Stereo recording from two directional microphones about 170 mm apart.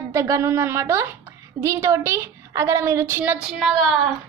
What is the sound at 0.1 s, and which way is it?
A woman's voice, 20° right (ahead or behind).